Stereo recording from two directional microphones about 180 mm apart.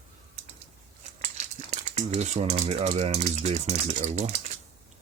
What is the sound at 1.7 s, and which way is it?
Speech, 40° right (ahead or behind).